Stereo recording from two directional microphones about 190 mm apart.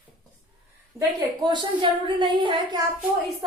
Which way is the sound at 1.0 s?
20° right (ahead or behind).